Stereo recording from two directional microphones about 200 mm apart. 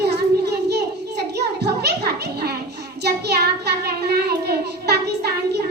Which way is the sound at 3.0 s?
55° right (ahead or behind).